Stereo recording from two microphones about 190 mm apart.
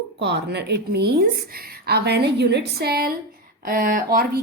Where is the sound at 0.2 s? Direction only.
60° right (ahead or behind).